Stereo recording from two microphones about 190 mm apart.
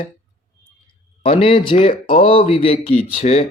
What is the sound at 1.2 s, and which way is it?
A man's voice, 30° left (ahead or behind).